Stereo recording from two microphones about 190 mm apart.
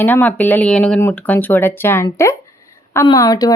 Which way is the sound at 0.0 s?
10° left (ahead or behind).